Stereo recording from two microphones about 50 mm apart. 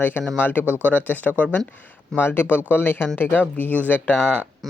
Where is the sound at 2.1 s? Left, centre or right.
Left.